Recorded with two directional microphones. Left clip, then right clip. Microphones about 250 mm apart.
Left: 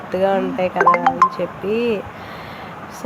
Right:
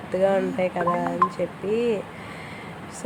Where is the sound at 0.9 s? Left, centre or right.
Left.